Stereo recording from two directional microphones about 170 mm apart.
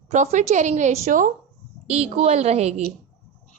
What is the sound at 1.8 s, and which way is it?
Speech, 35° right (ahead or behind).